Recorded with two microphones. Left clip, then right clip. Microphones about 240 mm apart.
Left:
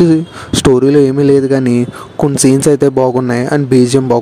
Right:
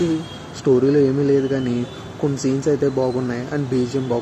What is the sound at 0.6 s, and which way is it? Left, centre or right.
Speech, left.